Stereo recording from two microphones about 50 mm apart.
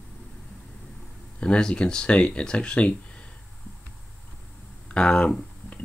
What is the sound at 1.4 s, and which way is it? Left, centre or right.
Speech, centre.